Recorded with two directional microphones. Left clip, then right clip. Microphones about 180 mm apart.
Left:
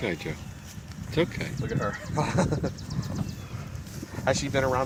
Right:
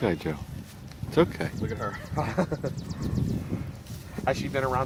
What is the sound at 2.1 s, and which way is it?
Speech, 45° left (ahead or behind).